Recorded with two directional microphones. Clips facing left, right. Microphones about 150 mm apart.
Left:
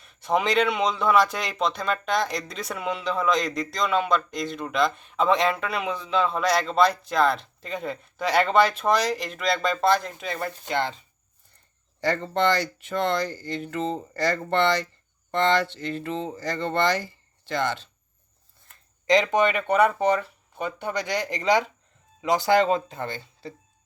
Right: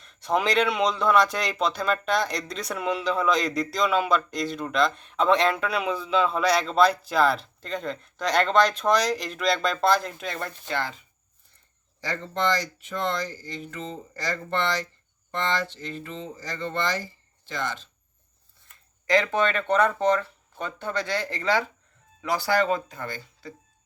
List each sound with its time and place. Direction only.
0.0 s a man's voice: 5° left (ahead or behind)
10.7 s speech: 25° left (ahead or behind)
11.9 s speech: 65° left (ahead or behind)
19.0 s speech: 15° left (ahead or behind)